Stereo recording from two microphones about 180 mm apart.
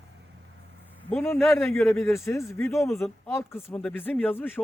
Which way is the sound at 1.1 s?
5° left (ahead or behind).